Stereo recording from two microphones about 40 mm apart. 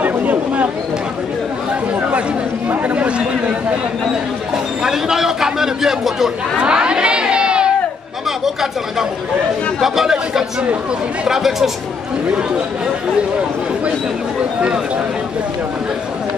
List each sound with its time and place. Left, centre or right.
0.0 s a sound: right
2.0 s chatter: right
2.7 s chatter: right
4.8 s a sound: centre
6.6 s crowd: right
9.8 s chatter: centre
11.2 s speech: centre